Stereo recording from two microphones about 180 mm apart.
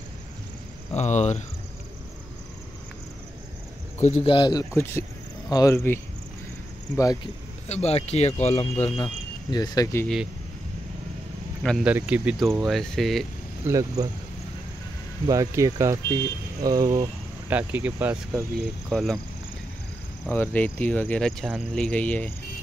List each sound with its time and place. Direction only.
0.9 s speech: 40° left (ahead or behind)
4.0 s speech: 35° left (ahead or behind); by 5.9 s 15° left (ahead or behind)
7.6 s speech: 35° left (ahead or behind)
9.5 s speech: 20° left (ahead or behind)
11.6 s speech: centre (ahead or behind)
13.7 s speech: 20° right (ahead or behind)
15.2 s speech: 20° right (ahead or behind)
17.6 s speech: 10° right (ahead or behind)
18.9 s speech: centre (ahead or behind)
20.2 s speech: 10° left (ahead or behind)